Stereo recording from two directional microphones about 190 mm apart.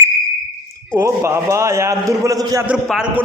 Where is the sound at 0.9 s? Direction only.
15° right (ahead or behind).